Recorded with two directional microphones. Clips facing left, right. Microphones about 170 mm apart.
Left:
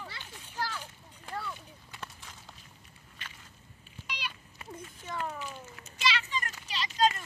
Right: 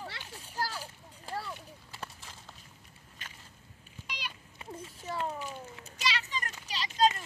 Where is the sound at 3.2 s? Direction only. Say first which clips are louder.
Left 1 dB; 45° right (ahead or behind).